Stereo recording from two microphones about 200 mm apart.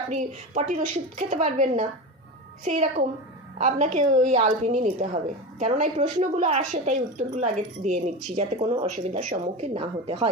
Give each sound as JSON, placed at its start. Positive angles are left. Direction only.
{"t": 0.1, "sound": "a woman's voice", "side_deg": -35}